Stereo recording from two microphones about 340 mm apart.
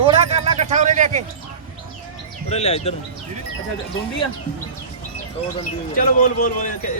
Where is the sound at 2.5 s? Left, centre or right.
Centre.